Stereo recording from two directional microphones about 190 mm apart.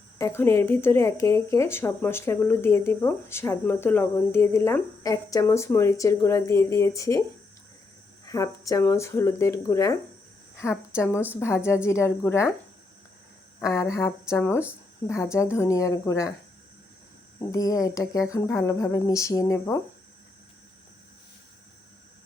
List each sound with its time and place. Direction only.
0.2 s speech: 15° left (ahead or behind)
13.6 s speech: 15° left (ahead or behind)
17.4 s speech: 20° left (ahead or behind)